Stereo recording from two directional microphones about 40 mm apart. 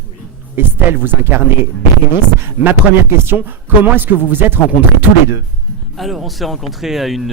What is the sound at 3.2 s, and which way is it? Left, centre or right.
A man's voice, right.